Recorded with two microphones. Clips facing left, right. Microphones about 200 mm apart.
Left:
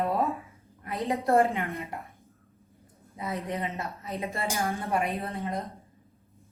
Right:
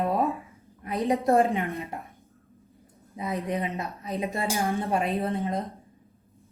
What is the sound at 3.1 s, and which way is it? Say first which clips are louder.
Speech: right 3 dB; 15° right (ahead or behind).